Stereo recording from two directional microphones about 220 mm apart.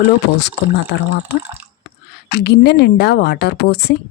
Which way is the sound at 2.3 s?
50° left (ahead or behind).